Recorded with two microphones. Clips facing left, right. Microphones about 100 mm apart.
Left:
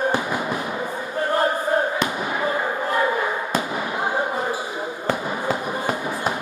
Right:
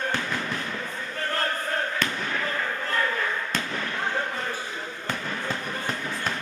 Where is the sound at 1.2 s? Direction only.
15° left (ahead or behind).